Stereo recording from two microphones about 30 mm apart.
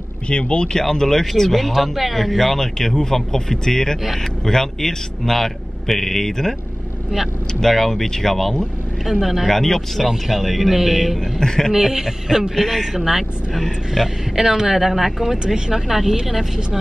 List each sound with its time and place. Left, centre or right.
0.3 s speech: left
0.7 s speech: centre
1.8 s speech: centre
2.1 s speech: centre
7.6 s speech: centre
9.0 s speech: centre
9.5 s speech: centre
10.0 s speech: centre
11.1 s speech: centre
11.7 s a man's voice: centre
12.5 s speech: centre
12.9 s speech: centre
15.3 s a man's voice: right
15.9 s speech: centre